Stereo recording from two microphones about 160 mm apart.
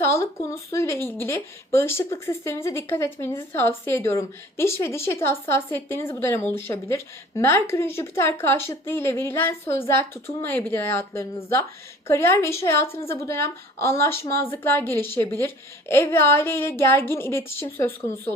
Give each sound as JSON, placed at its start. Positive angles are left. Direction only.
{"t": 0.0, "sound": "speech", "side_deg": 15}